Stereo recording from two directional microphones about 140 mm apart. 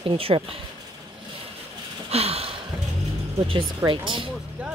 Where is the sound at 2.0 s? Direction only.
45° right (ahead or behind).